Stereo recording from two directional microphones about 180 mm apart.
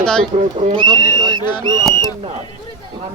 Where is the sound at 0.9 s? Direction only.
15° left (ahead or behind).